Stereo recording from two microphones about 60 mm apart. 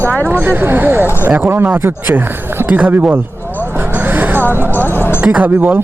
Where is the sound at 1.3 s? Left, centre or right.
Right.